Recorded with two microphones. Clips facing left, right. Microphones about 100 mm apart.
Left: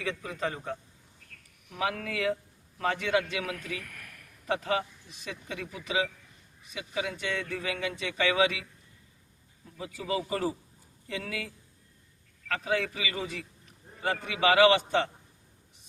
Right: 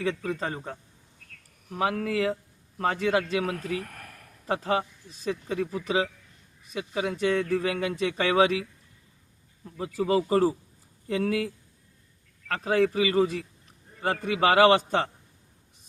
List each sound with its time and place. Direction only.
0.0 s a man's voice: 30° right (ahead or behind)
10.0 s speech: 45° right (ahead or behind)
12.5 s speech: 40° right (ahead or behind)